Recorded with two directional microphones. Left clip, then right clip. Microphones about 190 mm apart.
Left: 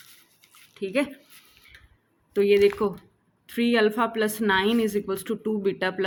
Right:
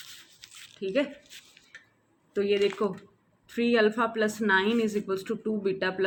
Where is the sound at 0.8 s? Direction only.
50° left (ahead or behind).